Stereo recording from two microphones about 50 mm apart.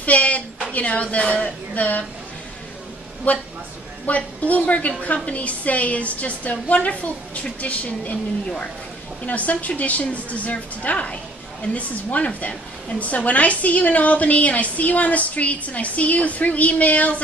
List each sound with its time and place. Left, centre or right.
0.0 s a sound: left
0.7 s a woman's voice: left
3.3 s a woman's voice: left
9.2 s a woman's voice: left